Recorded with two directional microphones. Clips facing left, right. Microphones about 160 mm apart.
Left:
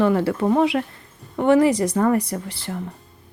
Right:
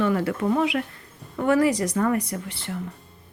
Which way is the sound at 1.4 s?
25° left (ahead or behind).